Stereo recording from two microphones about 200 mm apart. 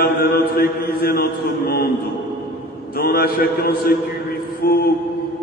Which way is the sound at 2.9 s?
50° left (ahead or behind).